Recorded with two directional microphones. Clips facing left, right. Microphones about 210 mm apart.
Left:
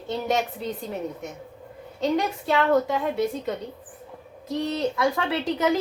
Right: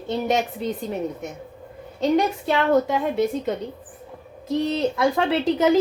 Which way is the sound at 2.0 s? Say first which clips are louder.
Right 4 dB; 20° right (ahead or behind).